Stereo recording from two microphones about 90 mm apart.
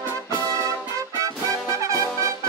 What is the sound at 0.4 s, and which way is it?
Music, 40° right (ahead or behind).